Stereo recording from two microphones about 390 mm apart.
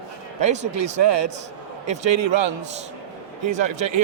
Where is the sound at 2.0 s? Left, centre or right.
Right.